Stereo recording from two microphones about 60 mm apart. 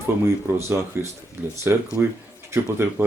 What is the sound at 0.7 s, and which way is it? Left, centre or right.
Speech, right.